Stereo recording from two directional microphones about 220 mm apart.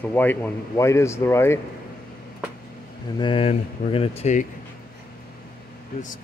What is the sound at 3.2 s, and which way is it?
Speech, 25° left (ahead or behind).